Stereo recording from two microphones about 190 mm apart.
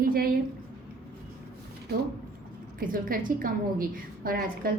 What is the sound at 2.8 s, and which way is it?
A woman's voice, 45° right (ahead or behind).